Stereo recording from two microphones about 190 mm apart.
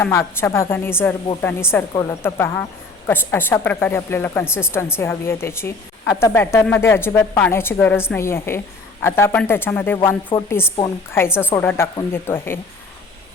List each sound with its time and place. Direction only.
0.0 s speech: 15° left (ahead or behind)